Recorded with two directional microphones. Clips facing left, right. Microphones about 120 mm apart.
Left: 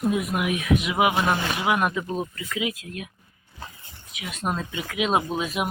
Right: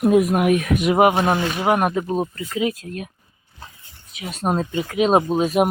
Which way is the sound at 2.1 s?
35° right (ahead or behind).